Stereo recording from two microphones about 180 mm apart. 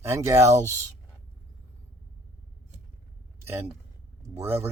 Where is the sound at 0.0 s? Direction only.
15° right (ahead or behind).